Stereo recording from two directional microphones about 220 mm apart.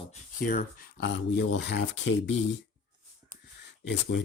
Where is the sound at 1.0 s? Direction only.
50° left (ahead or behind).